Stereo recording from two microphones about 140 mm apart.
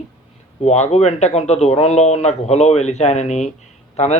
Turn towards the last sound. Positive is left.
turn(degrees=50)  # may be behind; listen again after turning